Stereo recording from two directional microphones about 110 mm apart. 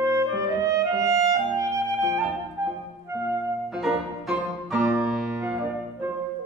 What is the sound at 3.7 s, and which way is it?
Music, 5° right (ahead or behind).